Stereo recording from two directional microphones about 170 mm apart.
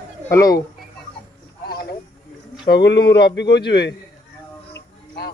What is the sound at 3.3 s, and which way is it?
Speech, 90° left.